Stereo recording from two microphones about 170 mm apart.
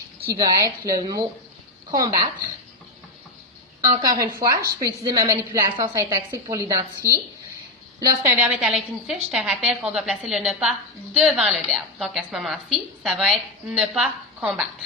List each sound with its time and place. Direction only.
0.3 s a woman's voice: 20° right (ahead or behind)
4.0 s a woman's voice: 20° right (ahead or behind)
7.0 s a woman's voice: 15° left (ahead or behind)
7.9 s a woman's voice: 20° right (ahead or behind)
8.4 s a woman's voice: 5° right (ahead or behind)